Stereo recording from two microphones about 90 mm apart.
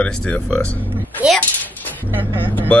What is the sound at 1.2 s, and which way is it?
Speech, 15° right (ahead or behind).